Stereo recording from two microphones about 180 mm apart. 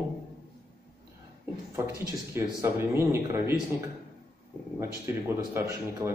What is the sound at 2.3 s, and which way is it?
A man's voice, 15° right (ahead or behind).